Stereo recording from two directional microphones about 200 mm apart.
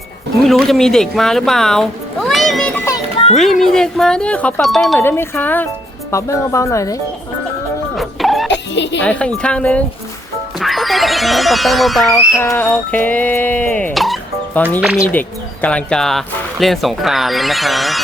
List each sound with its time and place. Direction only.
0.4 s speech: centre (ahead or behind)
4.9 s speech: 10° left (ahead or behind)
7.9 s music: centre (ahead or behind)
8.4 s music: 60° left (ahead or behind)
9.0 s speech: 5° left (ahead or behind)
12.1 s music: 15° left (ahead or behind)
15.6 s speech: 5° left (ahead or behind)